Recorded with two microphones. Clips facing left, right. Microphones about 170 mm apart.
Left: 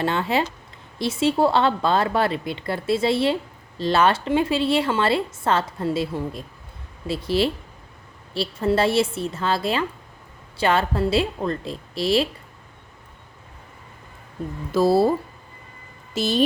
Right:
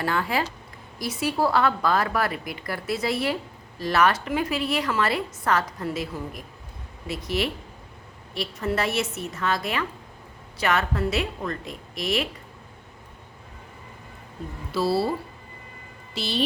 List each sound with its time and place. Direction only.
0.0 s a woman's voice: 25° left (ahead or behind)
14.7 s speech: 45° left (ahead or behind)
16.1 s speech: 45° left (ahead or behind)